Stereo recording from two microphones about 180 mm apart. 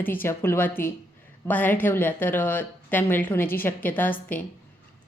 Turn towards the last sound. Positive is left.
turn(degrees=10)  # may be behind; listen again after turning